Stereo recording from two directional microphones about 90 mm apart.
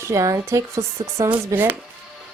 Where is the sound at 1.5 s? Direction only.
20° right (ahead or behind).